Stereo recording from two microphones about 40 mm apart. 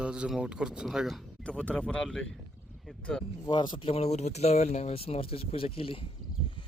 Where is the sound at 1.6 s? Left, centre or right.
Left.